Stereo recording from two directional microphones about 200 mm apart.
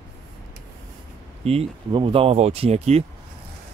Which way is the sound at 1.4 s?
30° right (ahead or behind).